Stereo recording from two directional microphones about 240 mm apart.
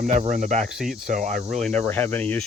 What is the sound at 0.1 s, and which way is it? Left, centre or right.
Speech, right.